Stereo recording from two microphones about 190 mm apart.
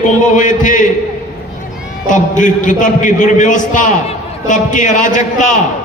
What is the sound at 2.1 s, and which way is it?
A man's voice, 40° left (ahead or behind).